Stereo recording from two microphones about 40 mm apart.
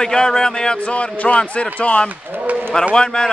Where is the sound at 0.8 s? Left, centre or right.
Left.